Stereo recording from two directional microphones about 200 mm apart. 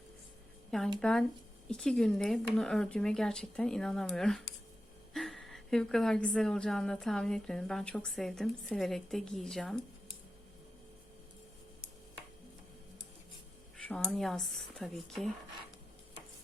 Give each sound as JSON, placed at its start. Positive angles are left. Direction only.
{"t": 0.9, "sound": "a woman's voice", "side_deg": 5}
{"t": 13.7, "sound": "a woman's voice", "side_deg": 5}